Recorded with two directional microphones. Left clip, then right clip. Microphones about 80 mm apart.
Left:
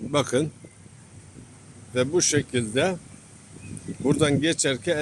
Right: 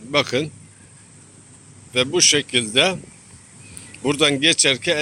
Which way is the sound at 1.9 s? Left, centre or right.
Left.